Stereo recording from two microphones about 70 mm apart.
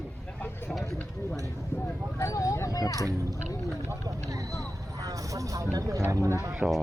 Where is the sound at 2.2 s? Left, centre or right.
Left.